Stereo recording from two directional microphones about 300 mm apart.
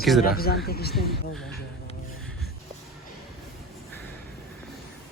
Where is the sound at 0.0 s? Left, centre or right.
Centre.